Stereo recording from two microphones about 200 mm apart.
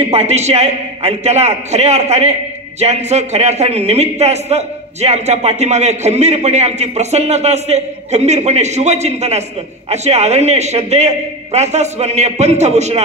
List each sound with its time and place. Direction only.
0.0 s a man's voice: 30° right (ahead or behind)